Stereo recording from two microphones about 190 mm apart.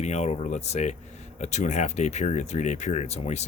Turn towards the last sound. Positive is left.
turn(degrees=35)  # may be behind; listen again after turning